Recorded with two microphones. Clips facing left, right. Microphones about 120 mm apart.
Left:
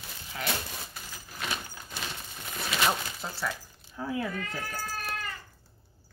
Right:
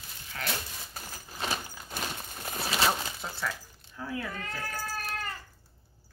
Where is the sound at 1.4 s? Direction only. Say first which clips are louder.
Right 2 dB; 35° right (ahead or behind).